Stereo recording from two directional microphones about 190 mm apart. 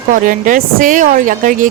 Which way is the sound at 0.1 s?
45° right (ahead or behind).